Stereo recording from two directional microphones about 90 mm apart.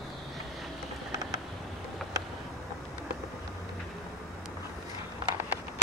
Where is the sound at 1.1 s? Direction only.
40° right (ahead or behind).